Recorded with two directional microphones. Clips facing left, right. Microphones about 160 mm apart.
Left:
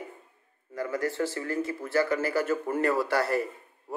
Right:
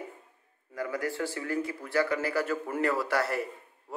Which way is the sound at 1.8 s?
5° left (ahead or behind).